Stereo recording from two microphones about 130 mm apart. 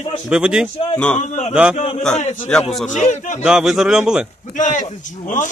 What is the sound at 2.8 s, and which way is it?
Speech, 65° left (ahead or behind).